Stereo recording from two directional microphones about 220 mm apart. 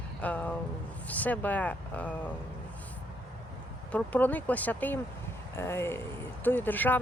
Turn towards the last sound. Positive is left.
turn(degrees=10)  # may be behind; listen again after turning